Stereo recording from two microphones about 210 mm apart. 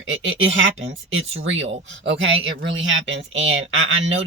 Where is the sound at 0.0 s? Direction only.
65° right (ahead or behind).